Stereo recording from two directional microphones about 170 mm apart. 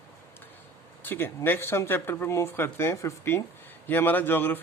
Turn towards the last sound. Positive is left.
turn(degrees=10)  # may be behind; listen again after turning